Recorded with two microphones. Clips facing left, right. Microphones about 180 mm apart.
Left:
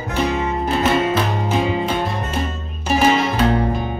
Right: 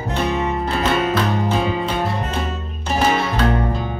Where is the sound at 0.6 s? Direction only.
15° left (ahead or behind).